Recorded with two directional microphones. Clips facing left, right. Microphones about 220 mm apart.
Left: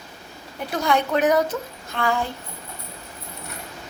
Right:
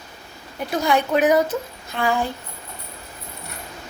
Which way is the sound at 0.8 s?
10° right (ahead or behind).